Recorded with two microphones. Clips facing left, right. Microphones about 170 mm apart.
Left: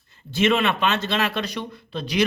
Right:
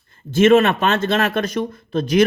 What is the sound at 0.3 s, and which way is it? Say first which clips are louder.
A man's voice: right 8 dB; 45° right (ahead or behind).